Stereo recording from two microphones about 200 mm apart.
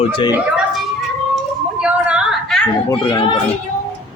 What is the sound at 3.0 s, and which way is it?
Speech, 25° left (ahead or behind).